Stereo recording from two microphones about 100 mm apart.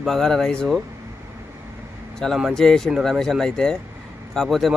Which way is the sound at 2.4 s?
Centre (ahead or behind).